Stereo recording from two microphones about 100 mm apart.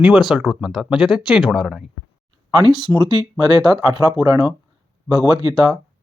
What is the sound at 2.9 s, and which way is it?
Speech, 45° right (ahead or behind).